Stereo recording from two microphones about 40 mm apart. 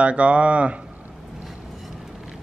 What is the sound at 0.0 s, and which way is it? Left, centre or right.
Speech, right.